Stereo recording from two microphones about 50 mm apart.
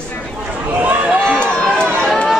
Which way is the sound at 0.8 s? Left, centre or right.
Right.